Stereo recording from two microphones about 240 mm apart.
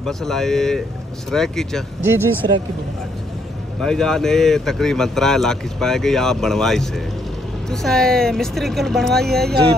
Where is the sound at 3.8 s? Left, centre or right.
Centre.